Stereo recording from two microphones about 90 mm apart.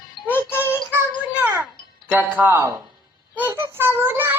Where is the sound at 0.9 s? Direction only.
20° right (ahead or behind).